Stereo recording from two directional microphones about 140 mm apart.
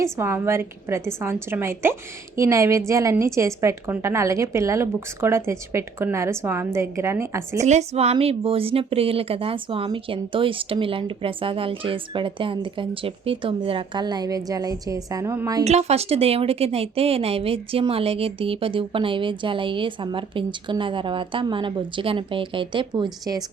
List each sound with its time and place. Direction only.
0.0 s a woman's voice: 15° right (ahead or behind)
7.6 s a woman's voice: 55° right (ahead or behind); by 15.6 s 25° right (ahead or behind)
15.6 s a woman's voice: 50° right (ahead or behind); by 23.0 s 35° right (ahead or behind)